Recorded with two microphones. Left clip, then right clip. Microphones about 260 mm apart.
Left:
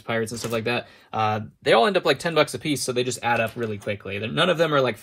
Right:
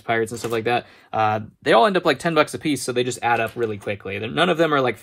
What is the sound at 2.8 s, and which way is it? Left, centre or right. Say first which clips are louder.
Speech: right 2 dB; right.